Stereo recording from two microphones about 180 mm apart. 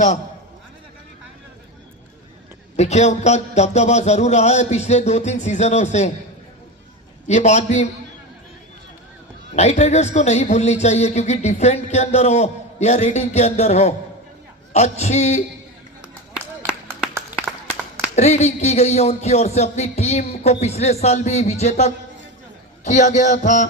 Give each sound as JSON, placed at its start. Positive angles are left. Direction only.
{"t": 2.7, "sound": "speech", "side_deg": 40}
{"t": 7.3, "sound": "speech", "side_deg": 40}
{"t": 9.6, "sound": "speech", "side_deg": 40}
{"t": 16.3, "sound": "clapping", "side_deg": -5}
{"t": 18.2, "sound": "speech", "side_deg": 40}
{"t": 22.9, "sound": "music", "side_deg": 45}